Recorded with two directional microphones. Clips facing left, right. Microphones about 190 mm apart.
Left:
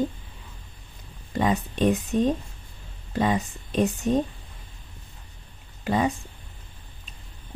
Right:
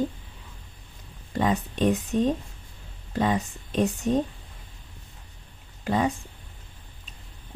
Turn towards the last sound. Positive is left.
turn(degrees=10)  # may be behind; listen again after turning